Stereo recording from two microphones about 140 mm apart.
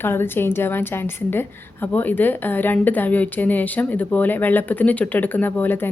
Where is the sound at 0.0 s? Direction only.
15° left (ahead or behind).